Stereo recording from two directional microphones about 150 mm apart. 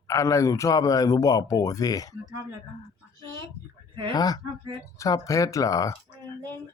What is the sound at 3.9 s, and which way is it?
Speech, 35° right (ahead or behind).